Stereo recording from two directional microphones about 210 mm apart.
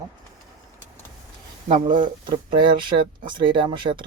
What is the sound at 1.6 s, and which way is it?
Speech, 25° right (ahead or behind).